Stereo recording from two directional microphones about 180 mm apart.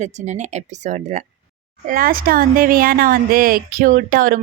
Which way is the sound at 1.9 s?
55° right (ahead or behind).